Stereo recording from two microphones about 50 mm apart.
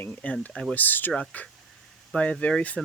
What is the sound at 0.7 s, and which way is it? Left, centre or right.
Speech, left.